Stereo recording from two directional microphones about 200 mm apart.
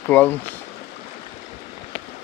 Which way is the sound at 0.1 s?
10° left (ahead or behind).